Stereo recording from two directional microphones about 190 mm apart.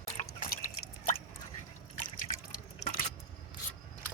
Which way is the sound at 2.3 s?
35° left (ahead or behind).